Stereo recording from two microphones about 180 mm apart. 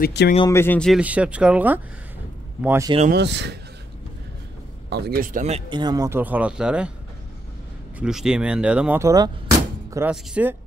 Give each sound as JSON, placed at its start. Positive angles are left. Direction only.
{"t": 0.0, "sound": "speech", "side_deg": 70}
{"t": 0.5, "sound": "speech", "side_deg": 10}
{"t": 1.0, "sound": "speech", "side_deg": -5}
{"t": 3.1, "sound": "speech", "side_deg": -70}
{"t": 4.8, "sound": "speech", "side_deg": -65}
{"t": 5.7, "sound": "speech", "side_deg": -25}
{"t": 8.0, "sound": "speech", "side_deg": -5}